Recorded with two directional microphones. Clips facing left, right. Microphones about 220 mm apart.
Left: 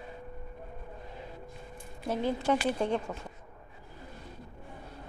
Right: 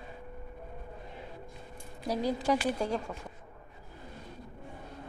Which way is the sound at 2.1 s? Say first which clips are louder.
Even; 40° right (ahead or behind).